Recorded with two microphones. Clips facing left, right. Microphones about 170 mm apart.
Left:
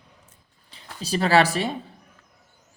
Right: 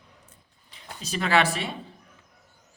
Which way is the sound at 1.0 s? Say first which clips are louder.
Left 4 dB; 35° left (ahead or behind).